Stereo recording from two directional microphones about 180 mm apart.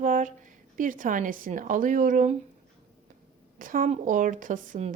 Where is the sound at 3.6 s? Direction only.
50° right (ahead or behind).